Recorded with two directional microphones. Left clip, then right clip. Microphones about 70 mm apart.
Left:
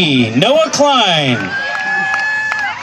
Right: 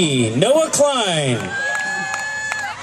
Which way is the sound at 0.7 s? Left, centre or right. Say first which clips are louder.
Left 5 dB; right.